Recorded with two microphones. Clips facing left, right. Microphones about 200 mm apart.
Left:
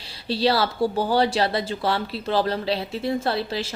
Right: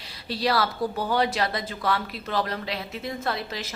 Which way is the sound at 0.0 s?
30° left (ahead or behind).